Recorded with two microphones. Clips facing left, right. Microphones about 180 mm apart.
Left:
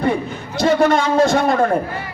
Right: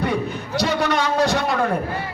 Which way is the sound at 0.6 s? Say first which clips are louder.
Left 7 dB; 50° left (ahead or behind).